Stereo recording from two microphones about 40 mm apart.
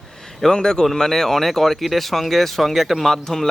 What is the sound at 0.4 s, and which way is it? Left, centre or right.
Speech, centre.